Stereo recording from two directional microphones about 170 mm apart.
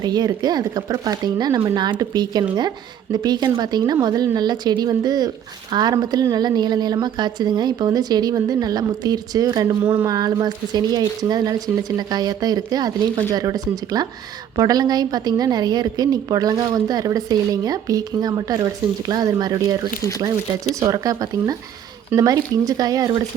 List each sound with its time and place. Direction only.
0.0 s a woman's voice: 25° right (ahead or behind)
20.0 s speech: 20° left (ahead or behind)
20.7 s a woman's voice: 20° right (ahead or behind)